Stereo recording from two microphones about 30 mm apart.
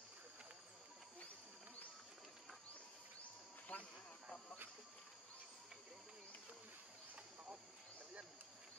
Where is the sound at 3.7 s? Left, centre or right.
Left.